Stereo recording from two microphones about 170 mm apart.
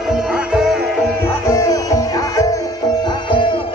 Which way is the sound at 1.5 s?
20° left (ahead or behind).